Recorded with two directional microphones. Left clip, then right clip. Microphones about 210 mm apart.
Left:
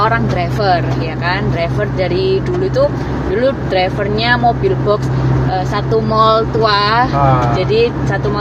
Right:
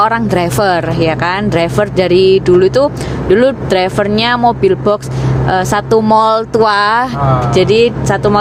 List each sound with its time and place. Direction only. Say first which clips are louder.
0.0 s speech: right 3 dB; 60° right (ahead or behind)